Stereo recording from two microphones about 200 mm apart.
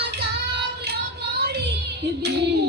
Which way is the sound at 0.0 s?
55° right (ahead or behind).